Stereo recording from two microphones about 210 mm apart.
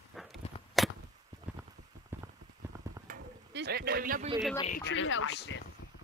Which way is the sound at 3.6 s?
50° right (ahead or behind).